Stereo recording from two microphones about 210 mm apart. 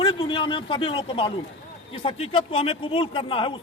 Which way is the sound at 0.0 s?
25° left (ahead or behind).